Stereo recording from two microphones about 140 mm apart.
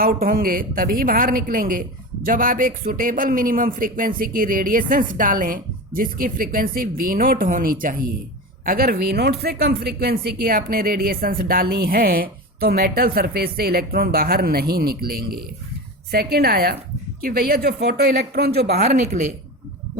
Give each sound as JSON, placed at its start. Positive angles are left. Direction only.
{"t": 0.0, "sound": "a woman's voice", "side_deg": -90}
{"t": 18.7, "sound": "a woman's voice", "side_deg": -90}